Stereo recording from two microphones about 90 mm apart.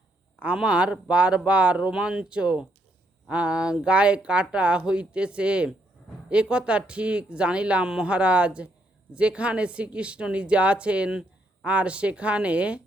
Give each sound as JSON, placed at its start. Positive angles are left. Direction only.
{"t": 0.3, "sound": "speech", "side_deg": -10}